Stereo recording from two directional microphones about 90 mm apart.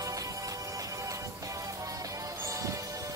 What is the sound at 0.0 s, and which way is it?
Music, 40° right (ahead or behind).